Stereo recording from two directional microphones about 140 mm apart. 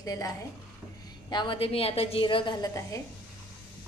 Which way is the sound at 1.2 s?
35° left (ahead or behind).